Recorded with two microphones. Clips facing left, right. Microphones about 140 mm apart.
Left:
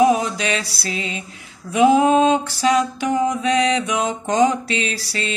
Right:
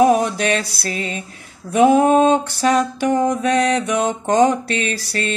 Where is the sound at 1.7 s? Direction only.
50° right (ahead or behind).